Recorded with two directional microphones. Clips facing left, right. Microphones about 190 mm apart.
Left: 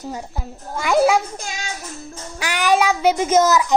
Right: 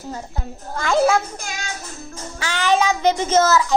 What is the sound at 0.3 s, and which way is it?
A child's voice, 5° left (ahead or behind).